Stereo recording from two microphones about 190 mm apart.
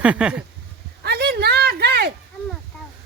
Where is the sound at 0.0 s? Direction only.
5° right (ahead or behind).